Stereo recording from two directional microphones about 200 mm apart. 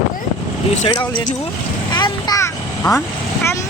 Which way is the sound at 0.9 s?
20° left (ahead or behind).